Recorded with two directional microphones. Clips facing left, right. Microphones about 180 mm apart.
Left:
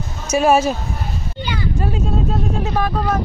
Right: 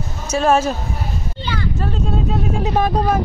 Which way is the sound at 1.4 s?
10° left (ahead or behind).